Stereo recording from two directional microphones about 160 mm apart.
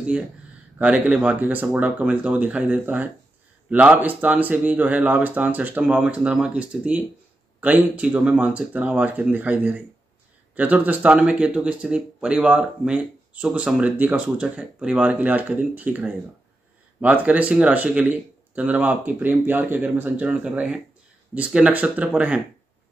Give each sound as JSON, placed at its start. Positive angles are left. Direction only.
{"t": 0.7, "sound": "speech", "side_deg": -5}